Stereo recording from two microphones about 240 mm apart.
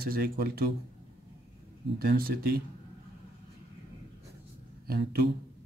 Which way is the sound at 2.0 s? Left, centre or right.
Right.